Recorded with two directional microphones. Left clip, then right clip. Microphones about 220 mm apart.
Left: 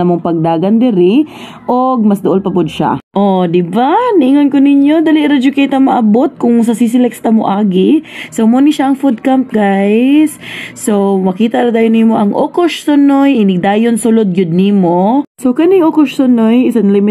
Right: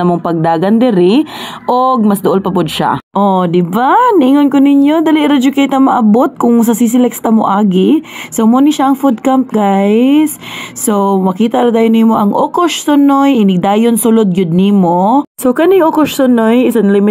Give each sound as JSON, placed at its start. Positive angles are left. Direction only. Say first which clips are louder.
{"t": 0.0, "sound": "speech", "louder": "even", "side_deg": -30}